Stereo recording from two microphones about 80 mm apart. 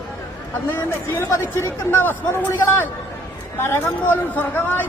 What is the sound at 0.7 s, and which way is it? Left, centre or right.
A man's voice, left.